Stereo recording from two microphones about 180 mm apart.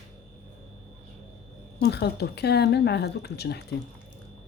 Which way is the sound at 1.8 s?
70° left (ahead or behind).